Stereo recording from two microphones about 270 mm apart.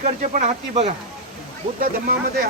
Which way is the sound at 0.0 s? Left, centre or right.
Right.